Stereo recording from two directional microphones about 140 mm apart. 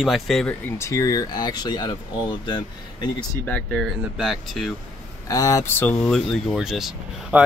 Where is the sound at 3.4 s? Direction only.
10° left (ahead or behind).